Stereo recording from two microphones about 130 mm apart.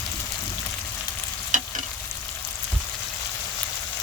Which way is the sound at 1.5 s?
80° right.